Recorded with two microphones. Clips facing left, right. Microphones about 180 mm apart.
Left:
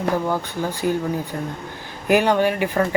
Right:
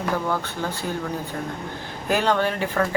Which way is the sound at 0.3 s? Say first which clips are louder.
Left 3 dB; 15° left (ahead or behind).